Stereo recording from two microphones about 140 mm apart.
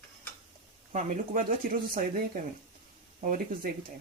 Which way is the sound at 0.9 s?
65° right (ahead or behind).